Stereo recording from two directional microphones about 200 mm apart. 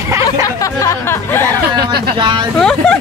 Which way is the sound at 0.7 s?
15° left (ahead or behind).